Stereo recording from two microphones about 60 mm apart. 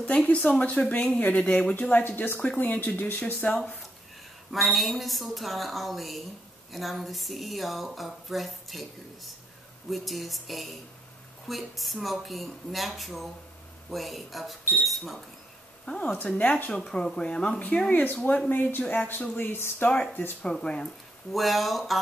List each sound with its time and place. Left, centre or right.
0.0 s speech: left
1.8 s speech: left
3.4 s speech: centre
4.5 s speech: centre
15.8 s speech: centre
16.1 s speech: left
16.8 s speech: centre; by 19.7 s left
19.8 s speech: centre
21.3 s speech: centre